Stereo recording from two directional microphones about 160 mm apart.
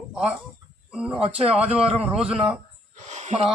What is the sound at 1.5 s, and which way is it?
Speech, 5° right (ahead or behind).